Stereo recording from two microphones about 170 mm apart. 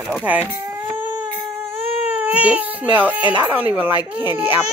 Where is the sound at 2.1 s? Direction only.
10° right (ahead or behind).